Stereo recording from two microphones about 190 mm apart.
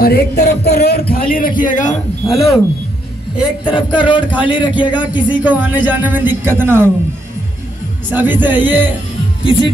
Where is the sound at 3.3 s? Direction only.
5° right (ahead or behind).